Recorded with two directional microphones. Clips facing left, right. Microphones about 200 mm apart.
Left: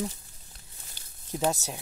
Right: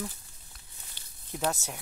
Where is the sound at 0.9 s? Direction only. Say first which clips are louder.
Left 5 dB; 40° left (ahead or behind).